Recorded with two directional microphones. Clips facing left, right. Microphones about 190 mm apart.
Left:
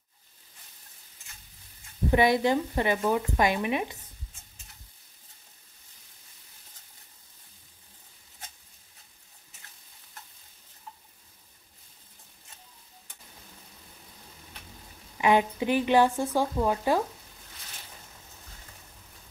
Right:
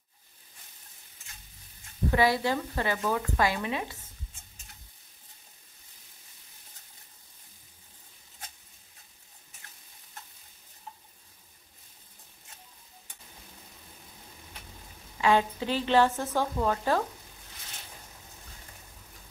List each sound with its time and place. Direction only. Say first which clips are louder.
2.0 s speech: left 3 dB; 20° left (ahead or behind)
15.1 s a woman's voice: left 2 dB; 15° left (ahead or behind)